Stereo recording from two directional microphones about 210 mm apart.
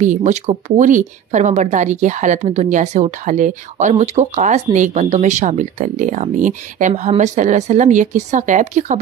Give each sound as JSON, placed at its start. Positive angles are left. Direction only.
{"t": 0.0, "sound": "speech", "side_deg": -35}